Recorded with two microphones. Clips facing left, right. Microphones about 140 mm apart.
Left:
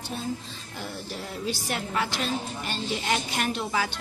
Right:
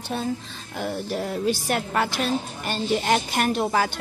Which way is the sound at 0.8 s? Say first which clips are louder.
Right 9 dB; 55° right (ahead or behind).